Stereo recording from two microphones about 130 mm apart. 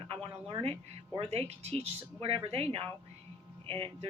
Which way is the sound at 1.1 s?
55° right (ahead or behind).